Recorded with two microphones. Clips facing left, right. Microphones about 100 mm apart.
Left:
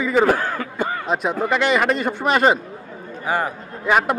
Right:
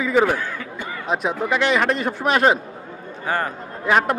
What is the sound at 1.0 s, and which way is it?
Speech, centre (ahead or behind).